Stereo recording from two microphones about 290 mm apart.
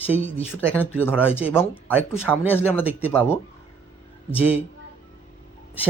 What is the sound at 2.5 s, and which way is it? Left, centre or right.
Speech, centre.